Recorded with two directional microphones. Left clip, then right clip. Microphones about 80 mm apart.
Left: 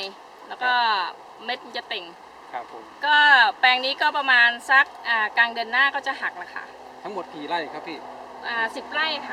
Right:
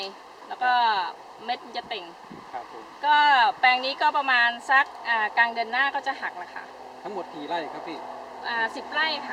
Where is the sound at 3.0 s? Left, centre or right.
Left.